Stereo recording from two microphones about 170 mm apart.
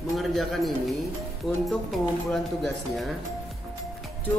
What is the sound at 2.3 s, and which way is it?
Music, centre (ahead or behind).